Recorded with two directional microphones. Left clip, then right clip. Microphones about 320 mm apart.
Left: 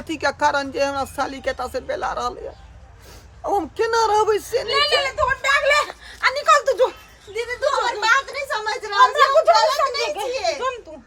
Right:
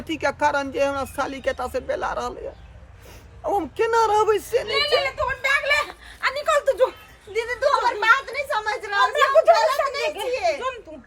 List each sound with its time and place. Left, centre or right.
0.1 s a woman's voice: centre
3.4 s a woman's voice: centre
4.7 s a sound: left; by 6.9 s centre
7.3 s a woman's voice: centre